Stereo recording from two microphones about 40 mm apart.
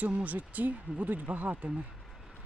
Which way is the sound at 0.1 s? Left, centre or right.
Right.